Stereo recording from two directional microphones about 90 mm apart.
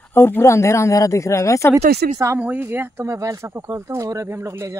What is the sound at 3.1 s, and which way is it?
Speech, 35° right (ahead or behind).